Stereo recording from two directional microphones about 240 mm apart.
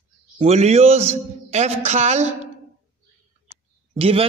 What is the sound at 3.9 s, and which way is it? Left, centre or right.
Speech, right.